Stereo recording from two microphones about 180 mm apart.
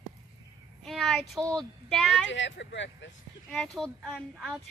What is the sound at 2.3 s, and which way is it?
Speech, 85° left.